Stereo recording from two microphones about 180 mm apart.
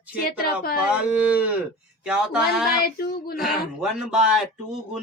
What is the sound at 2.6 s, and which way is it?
Female singing, 55° left (ahead or behind).